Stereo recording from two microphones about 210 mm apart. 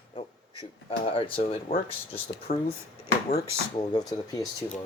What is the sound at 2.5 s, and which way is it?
Speech, 40° left (ahead or behind).